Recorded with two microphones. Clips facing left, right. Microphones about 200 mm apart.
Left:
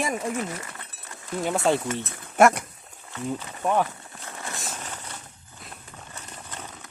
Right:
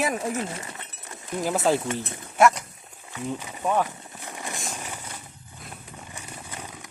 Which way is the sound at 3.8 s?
15° right (ahead or behind).